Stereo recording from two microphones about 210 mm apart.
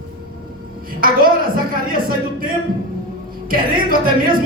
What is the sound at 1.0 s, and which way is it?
Speech, 45° right (ahead or behind).